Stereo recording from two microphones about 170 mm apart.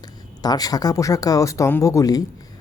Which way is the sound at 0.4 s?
20° left (ahead or behind).